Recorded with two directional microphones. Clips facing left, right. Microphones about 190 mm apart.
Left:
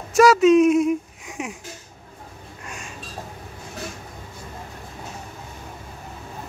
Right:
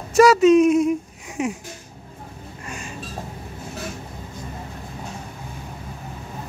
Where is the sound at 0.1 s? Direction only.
Centre (ahead or behind).